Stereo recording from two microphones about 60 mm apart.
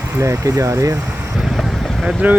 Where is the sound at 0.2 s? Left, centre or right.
Right.